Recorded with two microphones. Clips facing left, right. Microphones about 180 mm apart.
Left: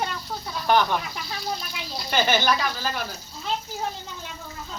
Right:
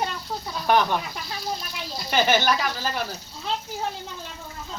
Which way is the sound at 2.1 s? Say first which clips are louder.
Right 1 dB; 5° right (ahead or behind).